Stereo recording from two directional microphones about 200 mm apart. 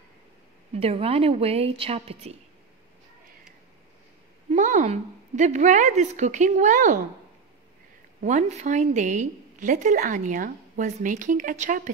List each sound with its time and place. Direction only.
0.7 s a woman's voice: 30° right (ahead or behind)
4.5 s a woman's voice: 40° right (ahead or behind)
8.2 s a woman's voice: 40° right (ahead or behind)